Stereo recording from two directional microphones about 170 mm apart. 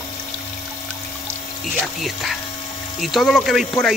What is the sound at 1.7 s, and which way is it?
Speech, centre (ahead or behind).